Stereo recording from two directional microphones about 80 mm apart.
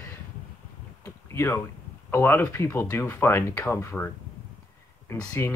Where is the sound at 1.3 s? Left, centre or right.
Left.